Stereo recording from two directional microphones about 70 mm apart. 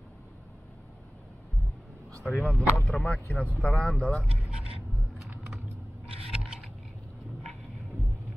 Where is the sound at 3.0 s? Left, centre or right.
Centre.